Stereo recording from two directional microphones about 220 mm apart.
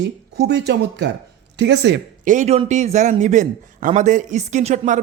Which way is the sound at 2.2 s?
35° right (ahead or behind).